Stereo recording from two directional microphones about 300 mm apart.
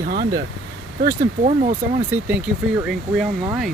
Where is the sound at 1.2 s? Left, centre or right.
Right.